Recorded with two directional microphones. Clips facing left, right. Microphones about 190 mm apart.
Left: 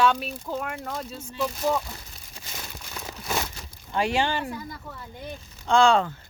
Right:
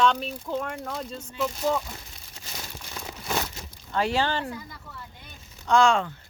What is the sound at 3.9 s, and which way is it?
Speech, 15° left (ahead or behind).